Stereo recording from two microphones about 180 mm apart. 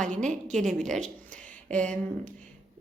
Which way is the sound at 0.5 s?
Centre (ahead or behind).